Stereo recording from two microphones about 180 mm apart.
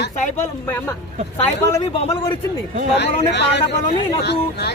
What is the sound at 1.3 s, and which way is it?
Speech, 15° left (ahead or behind).